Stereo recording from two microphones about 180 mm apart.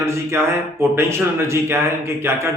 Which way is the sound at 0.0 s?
15° right (ahead or behind).